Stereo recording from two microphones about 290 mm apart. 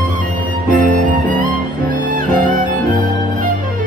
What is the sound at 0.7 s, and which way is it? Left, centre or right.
Music, right.